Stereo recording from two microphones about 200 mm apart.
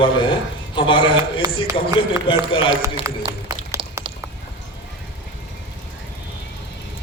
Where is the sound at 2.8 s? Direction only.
15° right (ahead or behind).